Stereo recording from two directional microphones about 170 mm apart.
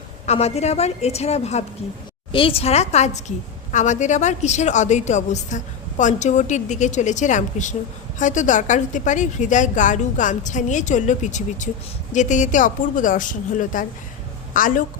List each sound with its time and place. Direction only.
0.3 s a woman's voice: 40° left (ahead or behind)